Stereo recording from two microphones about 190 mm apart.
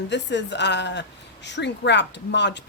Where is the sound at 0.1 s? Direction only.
65° left (ahead or behind).